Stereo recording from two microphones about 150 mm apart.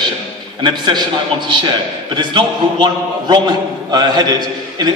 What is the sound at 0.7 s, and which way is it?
A man's voice, 30° right (ahead or behind).